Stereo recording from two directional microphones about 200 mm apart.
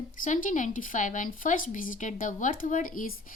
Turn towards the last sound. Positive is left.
turn(degrees=45)  # may be behind; listen again after turning